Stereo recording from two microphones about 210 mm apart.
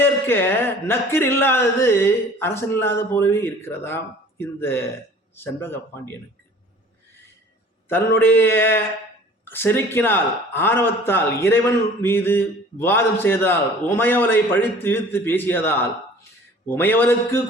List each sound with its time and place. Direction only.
0.0 s a man's voice: 10° left (ahead or behind)
7.9 s a man's voice: 10° left (ahead or behind)